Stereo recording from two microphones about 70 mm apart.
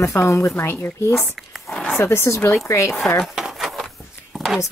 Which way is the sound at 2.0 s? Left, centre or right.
Left.